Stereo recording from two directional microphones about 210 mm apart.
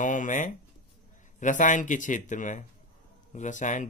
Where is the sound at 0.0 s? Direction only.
35° left (ahead or behind).